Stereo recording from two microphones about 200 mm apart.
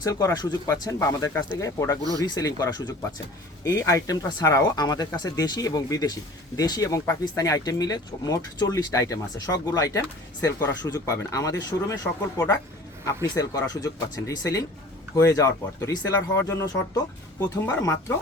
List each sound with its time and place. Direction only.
0.0 s speech: 15° left (ahead or behind)
13.3 s speech: 20° left (ahead or behind)